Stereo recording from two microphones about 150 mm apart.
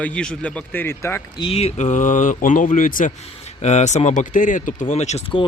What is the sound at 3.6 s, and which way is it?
Speech, 50° left (ahead or behind).